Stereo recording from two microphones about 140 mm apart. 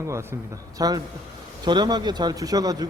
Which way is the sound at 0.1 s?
20° right (ahead or behind).